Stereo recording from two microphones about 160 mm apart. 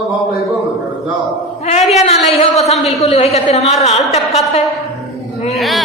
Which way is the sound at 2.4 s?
40° left (ahead or behind).